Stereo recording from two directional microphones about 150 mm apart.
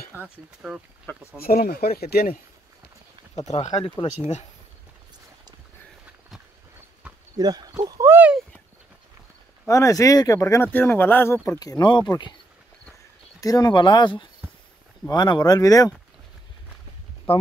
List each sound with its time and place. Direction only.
0.1 s speech: 10° right (ahead or behind)
0.6 s speech: centre (ahead or behind)
1.1 s speech: 15° left (ahead or behind)
1.4 s speech: 90° left
3.4 s speech: 50° left (ahead or behind)
7.3 s speech: 25° right (ahead or behind)
9.7 s speech: 20° left (ahead or behind)
11.6 s speech: 25° left (ahead or behind)
13.4 s speech: 25° left (ahead or behind)
17.3 s speech: 40° left (ahead or behind)